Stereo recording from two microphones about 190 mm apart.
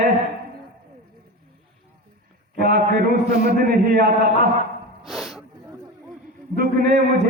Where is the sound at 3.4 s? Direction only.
55° right (ahead or behind).